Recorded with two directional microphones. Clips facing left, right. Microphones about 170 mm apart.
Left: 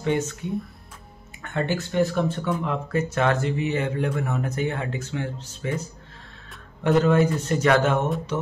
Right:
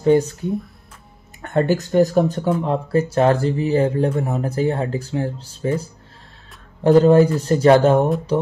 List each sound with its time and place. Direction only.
0.0 s speech: 35° right (ahead or behind)